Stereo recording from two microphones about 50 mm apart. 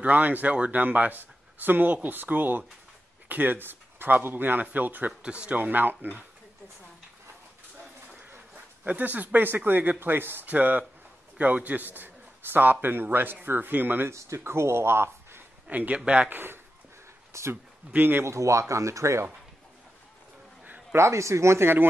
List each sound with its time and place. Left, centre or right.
0.0 s a man's voice: right
5.2 s speech: right
5.6 s a man's voice: right
8.8 s a man's voice: right
10.4 s a man's voice: right
14.1 s speech: right
15.7 s speech: right
16.3 s a man's voice: right
17.3 s speech: right
17.9 s a man's voice: right
18.2 s speech: right
20.9 s speech: right